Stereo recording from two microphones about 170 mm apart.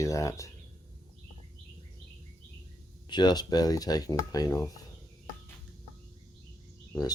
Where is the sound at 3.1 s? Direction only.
25° left (ahead or behind).